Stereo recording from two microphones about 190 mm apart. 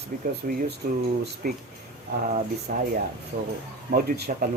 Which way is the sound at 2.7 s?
50° right (ahead or behind).